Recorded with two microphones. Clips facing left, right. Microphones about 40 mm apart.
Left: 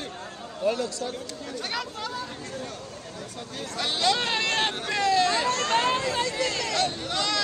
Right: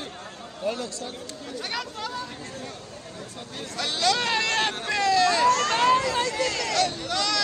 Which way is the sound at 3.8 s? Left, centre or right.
Left.